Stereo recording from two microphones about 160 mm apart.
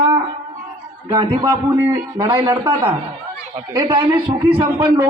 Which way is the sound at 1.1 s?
30° right (ahead or behind).